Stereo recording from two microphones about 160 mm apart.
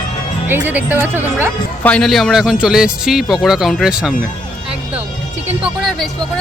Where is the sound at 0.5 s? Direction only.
10° right (ahead or behind).